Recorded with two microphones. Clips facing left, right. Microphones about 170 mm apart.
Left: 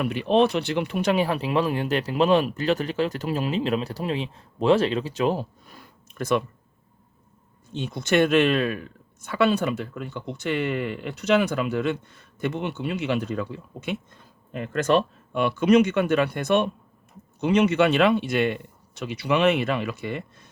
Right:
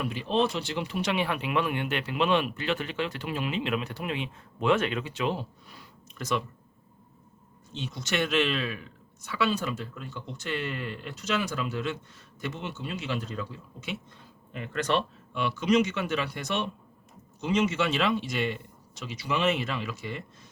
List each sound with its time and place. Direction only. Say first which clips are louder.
0.0 s speech: left 7 dB; 65° left (ahead or behind)
7.7 s speech: left 9 dB; 55° left (ahead or behind)